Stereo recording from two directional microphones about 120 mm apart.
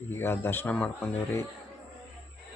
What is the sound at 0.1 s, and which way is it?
Speech, 20° left (ahead or behind).